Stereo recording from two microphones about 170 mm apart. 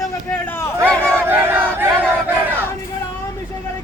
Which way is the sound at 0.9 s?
5° left (ahead or behind).